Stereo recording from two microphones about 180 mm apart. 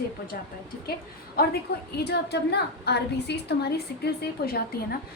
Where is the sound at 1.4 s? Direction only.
55° left (ahead or behind).